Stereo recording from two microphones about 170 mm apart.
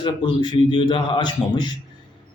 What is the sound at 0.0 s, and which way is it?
A man's voice, 30° left (ahead or behind).